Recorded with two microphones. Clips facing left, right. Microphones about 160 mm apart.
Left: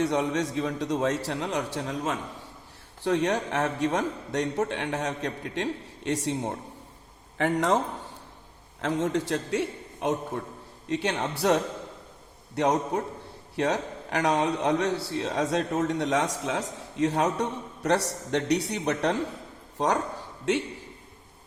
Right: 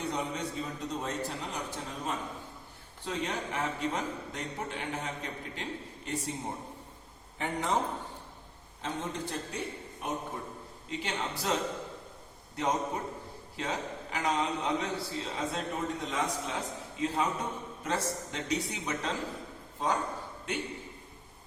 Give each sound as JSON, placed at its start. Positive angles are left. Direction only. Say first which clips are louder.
{"t": 0.0, "sound": "a man's voice", "louder": "left 9 dB", "side_deg": 85}
{"t": 8.8, "sound": "a man's voice", "louder": "left 9 dB", "side_deg": 90}
{"t": 10.8, "sound": "a man's voice", "louder": "left 8 dB", "side_deg": 70}
{"t": 19.8, "sound": "speech", "louder": "left 6 dB", "side_deg": 80}